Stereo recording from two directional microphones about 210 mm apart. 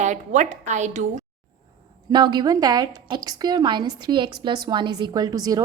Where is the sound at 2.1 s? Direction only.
20° right (ahead or behind).